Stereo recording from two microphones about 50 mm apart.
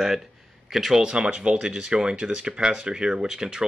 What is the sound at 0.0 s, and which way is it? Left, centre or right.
Speech, centre.